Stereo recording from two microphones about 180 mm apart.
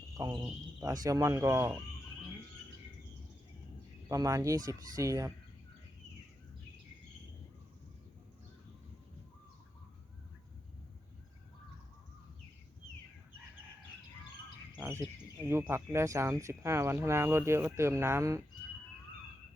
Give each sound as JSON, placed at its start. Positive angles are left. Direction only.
{"t": 0.1, "sound": "speech", "side_deg": -20}
{"t": 4.1, "sound": "speech", "side_deg": -20}
{"t": 14.8, "sound": "a sound", "side_deg": -15}
{"t": 15.4, "sound": "speech", "side_deg": -15}